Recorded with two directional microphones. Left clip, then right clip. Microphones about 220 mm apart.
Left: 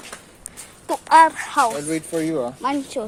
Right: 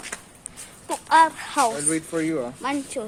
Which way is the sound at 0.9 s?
25° left (ahead or behind).